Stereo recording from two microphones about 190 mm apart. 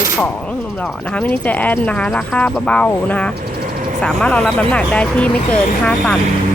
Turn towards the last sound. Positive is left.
turn(degrees=5)  # may be behind; listen again after turning